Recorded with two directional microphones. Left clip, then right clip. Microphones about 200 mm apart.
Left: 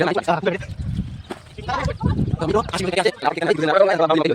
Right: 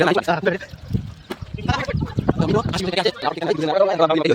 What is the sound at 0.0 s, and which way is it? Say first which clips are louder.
Speech: right 3 dB; 5° right (ahead or behind).